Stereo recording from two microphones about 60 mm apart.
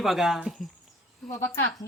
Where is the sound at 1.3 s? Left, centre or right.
Left.